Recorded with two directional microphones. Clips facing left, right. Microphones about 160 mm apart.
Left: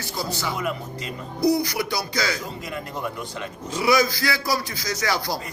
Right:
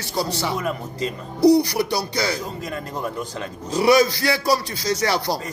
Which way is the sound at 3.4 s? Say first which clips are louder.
Right 6 dB; 35° right (ahead or behind).